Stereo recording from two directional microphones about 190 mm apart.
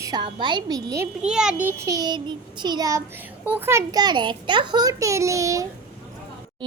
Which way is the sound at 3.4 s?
10° right (ahead or behind).